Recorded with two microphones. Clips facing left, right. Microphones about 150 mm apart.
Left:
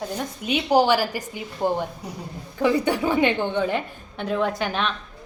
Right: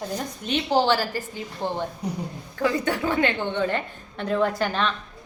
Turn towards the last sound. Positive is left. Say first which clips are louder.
# right 1 dB
turn(degrees=0)  # may be behind; listen again after turning